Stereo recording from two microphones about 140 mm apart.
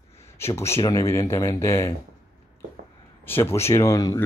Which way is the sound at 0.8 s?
25° left (ahead or behind).